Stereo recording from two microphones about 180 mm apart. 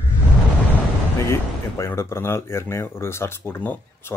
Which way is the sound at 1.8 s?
15° left (ahead or behind).